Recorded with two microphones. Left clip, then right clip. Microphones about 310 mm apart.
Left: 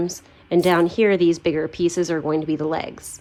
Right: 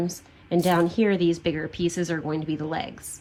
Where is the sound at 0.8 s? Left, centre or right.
Left.